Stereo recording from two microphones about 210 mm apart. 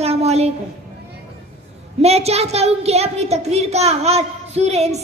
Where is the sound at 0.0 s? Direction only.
30° right (ahead or behind).